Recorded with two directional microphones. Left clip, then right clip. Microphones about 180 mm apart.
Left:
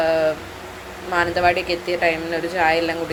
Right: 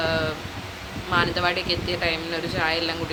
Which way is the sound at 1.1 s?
10° left (ahead or behind).